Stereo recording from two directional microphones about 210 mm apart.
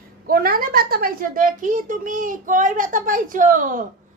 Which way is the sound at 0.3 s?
45° right (ahead or behind).